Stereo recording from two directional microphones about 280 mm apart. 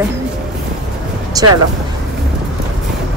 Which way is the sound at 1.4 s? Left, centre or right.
Centre.